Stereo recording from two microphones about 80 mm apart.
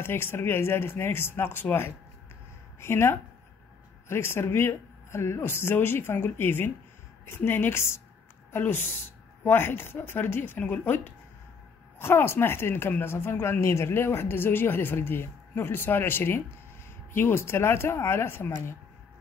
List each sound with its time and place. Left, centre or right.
0.0 s a woman's voice: left